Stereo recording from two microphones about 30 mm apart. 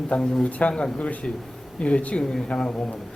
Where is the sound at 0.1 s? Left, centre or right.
Left.